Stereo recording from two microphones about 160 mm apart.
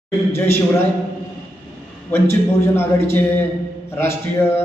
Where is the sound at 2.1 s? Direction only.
15° left (ahead or behind).